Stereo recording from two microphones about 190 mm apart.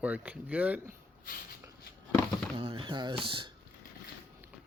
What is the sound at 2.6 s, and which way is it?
Speech, 25° right (ahead or behind).